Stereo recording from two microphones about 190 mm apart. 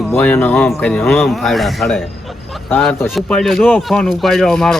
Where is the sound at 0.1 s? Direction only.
10° left (ahead or behind).